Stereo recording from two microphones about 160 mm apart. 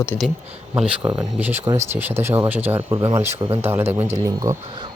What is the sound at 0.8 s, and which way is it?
Speech, 10° right (ahead or behind).